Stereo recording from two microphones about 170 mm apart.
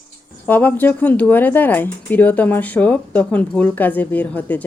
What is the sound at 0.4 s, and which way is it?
Speech, 10° left (ahead or behind).